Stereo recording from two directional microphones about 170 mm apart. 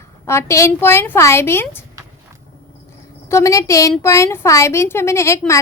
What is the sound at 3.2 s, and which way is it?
A woman's voice, 15° left (ahead or behind).